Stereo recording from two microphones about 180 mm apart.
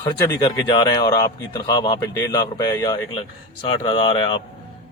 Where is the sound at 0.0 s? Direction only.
20° left (ahead or behind).